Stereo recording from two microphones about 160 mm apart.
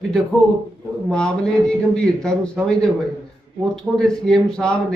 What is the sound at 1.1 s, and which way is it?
Speech, 5° left (ahead or behind).